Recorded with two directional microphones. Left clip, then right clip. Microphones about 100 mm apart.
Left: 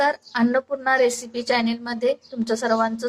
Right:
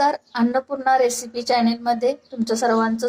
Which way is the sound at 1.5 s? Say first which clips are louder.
Right 4 dB; 20° right (ahead or behind).